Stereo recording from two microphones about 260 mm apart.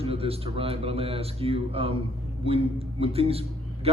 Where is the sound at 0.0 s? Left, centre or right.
Right.